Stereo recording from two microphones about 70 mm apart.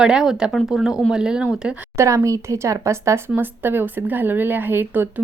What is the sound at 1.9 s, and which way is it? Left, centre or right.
Speech, right.